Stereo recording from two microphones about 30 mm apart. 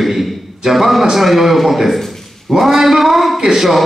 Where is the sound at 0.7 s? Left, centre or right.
Centre.